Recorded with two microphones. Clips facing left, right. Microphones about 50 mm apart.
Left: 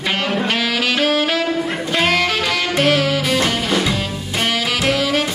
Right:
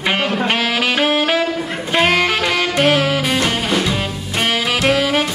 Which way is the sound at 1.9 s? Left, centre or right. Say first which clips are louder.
Right 3 dB; right.